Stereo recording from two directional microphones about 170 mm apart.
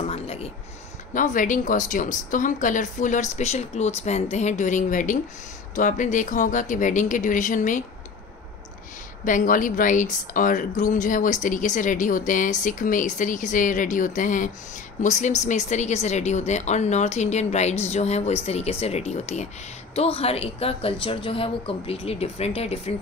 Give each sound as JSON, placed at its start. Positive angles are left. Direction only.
{"t": 0.0, "sound": "a sound", "side_deg": 35}
{"t": 1.1, "sound": "a woman's voice", "side_deg": 50}
{"t": 9.2, "sound": "a woman's voice", "side_deg": 50}